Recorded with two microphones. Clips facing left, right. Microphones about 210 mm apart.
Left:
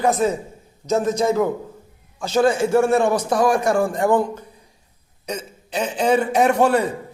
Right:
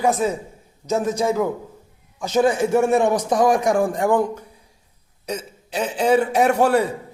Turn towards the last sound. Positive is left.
turn(degrees=-10)  # may be behind; listen again after turning